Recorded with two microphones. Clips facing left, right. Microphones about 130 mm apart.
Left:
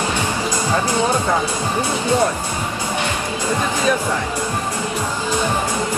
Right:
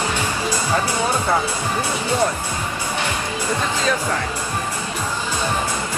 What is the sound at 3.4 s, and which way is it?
Speech, 15° left (ahead or behind).